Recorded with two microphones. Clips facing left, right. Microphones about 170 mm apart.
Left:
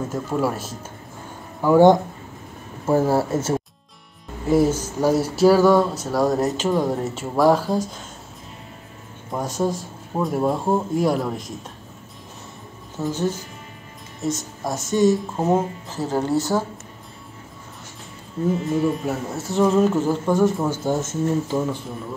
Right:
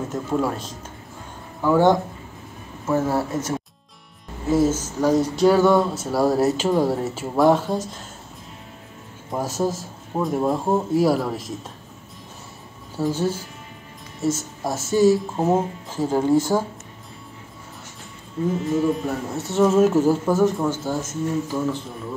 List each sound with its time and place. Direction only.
0.1 s speech: 5° left (ahead or behind)
2.9 s speech: 30° left (ahead or behind)
4.5 s speech: 15° left (ahead or behind)
9.3 s speech: 5° right (ahead or behind)
12.9 s speech: 10° right (ahead or behind)
18.9 s speech: centre (ahead or behind)
20.7 s speech: 20° left (ahead or behind)